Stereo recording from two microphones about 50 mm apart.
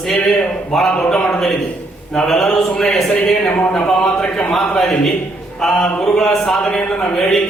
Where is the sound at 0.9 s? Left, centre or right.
Centre.